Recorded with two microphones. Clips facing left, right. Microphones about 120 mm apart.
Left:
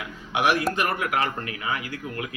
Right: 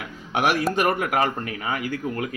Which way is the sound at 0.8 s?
50° right (ahead or behind).